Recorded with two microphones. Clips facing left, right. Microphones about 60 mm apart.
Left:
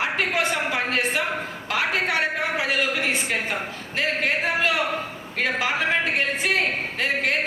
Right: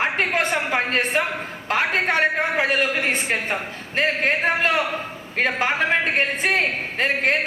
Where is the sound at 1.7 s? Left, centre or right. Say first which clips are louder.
Right 3 dB; right.